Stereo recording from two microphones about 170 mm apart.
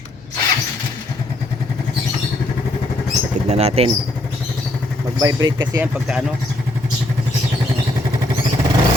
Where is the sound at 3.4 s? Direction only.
40° right (ahead or behind).